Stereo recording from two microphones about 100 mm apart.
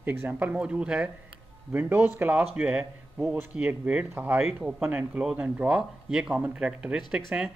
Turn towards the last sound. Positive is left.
turn(degrees=-15)  # may be behind; listen again after turning